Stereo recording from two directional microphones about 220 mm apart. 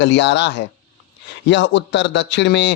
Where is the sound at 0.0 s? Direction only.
55° left (ahead or behind).